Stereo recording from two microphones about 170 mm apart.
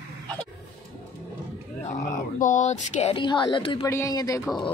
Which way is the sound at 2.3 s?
45° left (ahead or behind).